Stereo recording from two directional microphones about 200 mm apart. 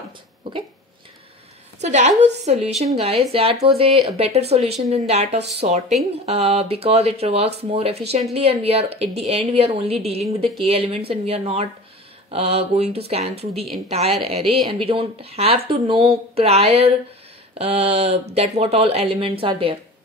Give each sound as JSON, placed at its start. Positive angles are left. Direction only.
{"t": 1.8, "sound": "a woman's voice", "side_deg": -35}
{"t": 14.4, "sound": "a woman's voice", "side_deg": 0}
{"t": 14.7, "sound": "a woman's voice", "side_deg": -25}